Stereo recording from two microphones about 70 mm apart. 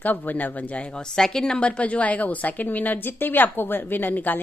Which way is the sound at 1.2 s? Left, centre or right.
Centre.